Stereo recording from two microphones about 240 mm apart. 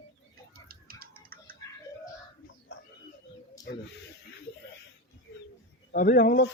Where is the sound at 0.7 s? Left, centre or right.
Right.